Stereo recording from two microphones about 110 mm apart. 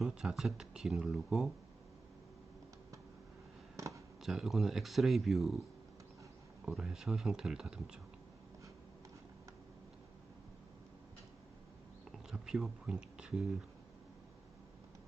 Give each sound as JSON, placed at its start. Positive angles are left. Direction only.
{"t": 0.0, "sound": "speech", "side_deg": -5}
{"t": 3.8, "sound": "a sound", "side_deg": -30}
{"t": 4.2, "sound": "speech", "side_deg": 0}
{"t": 6.7, "sound": "speech", "side_deg": -5}
{"t": 12.3, "sound": "speech", "side_deg": -5}